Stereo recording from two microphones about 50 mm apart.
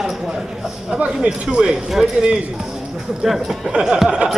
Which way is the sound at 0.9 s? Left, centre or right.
Right.